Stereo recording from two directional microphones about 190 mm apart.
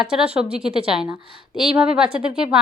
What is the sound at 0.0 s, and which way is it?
Speech, 5° right (ahead or behind).